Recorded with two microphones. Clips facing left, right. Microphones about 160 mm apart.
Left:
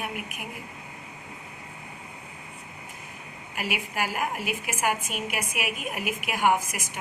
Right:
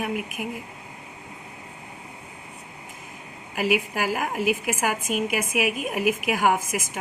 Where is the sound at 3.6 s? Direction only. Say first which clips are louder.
Right 7 dB; 90° right.